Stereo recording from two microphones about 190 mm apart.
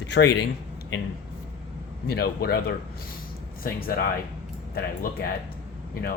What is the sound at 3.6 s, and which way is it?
Speech, 50° left (ahead or behind).